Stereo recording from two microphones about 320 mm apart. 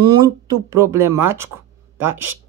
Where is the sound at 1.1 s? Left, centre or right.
Right.